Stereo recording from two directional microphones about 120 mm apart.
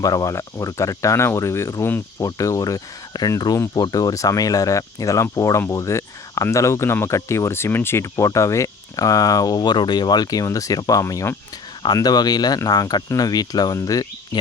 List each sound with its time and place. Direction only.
0.0 s speech: 30° left (ahead or behind)
11.9 s speech: 35° left (ahead or behind)